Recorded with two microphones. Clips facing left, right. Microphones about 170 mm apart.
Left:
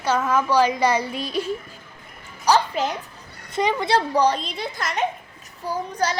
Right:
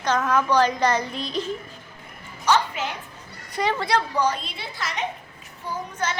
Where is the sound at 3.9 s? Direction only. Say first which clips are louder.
Left 6 dB; 35° left (ahead or behind).